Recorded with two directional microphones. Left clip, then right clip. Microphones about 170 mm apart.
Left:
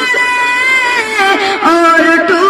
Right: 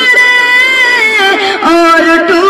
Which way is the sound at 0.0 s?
35° right (ahead or behind).